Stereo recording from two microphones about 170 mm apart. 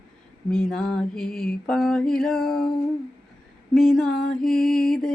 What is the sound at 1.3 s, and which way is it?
Mantra, 60° left (ahead or behind).